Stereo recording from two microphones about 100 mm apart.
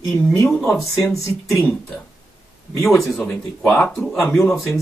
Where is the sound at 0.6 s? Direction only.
Centre (ahead or behind).